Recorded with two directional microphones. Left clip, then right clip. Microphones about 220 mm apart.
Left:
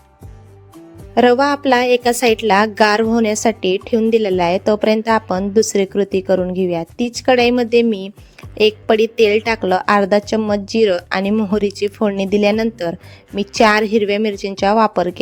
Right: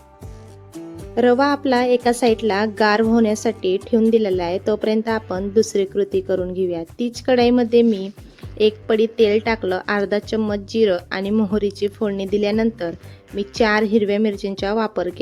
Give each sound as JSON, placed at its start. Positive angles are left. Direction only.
{"t": 1.1, "sound": "a woman's voice", "side_deg": 50}